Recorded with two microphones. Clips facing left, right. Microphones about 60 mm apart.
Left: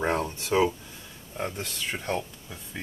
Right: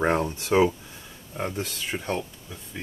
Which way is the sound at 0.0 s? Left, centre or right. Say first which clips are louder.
Right 3 dB; right.